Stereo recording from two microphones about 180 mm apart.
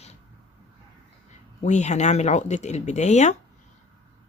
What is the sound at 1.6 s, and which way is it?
Speech, 40° left (ahead or behind).